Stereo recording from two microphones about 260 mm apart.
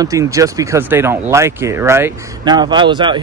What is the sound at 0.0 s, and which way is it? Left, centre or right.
Speech, centre.